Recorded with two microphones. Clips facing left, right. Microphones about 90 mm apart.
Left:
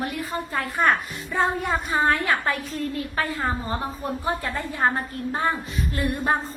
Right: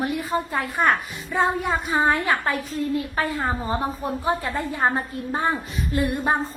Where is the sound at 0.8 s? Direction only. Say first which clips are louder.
Even; 5° right (ahead or behind).